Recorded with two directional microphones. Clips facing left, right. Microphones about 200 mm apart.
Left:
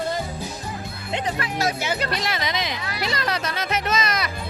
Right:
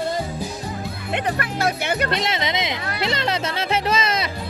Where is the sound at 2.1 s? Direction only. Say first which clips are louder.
Right 3 dB; 25° right (ahead or behind).